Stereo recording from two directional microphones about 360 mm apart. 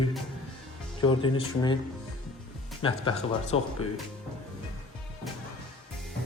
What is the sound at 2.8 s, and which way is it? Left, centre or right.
Speech, centre.